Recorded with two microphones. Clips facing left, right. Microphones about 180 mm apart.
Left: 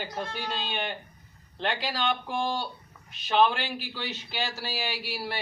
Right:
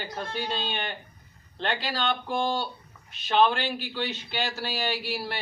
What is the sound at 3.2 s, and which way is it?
A man's voice, 10° left (ahead or behind).